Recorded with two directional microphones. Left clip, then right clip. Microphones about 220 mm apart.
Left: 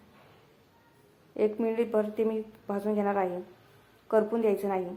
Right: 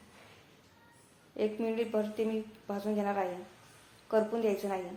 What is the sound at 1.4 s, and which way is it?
Speech, 25° left (ahead or behind).